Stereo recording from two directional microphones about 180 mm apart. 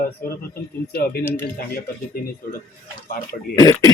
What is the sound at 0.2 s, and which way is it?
Speech, 60° left (ahead or behind).